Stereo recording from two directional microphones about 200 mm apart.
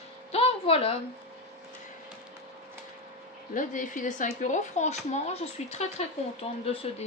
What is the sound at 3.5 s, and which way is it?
Speech, 40° left (ahead or behind).